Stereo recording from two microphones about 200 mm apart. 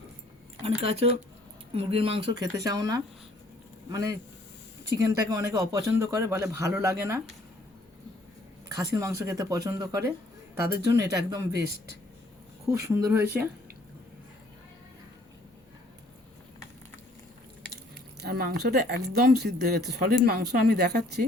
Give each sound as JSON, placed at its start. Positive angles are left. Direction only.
{"t": 0.6, "sound": "speech", "side_deg": -30}
{"t": 8.7, "sound": "speech", "side_deg": -15}
{"t": 12.6, "sound": "speech", "side_deg": -15}
{"t": 18.2, "sound": "speech", "side_deg": -50}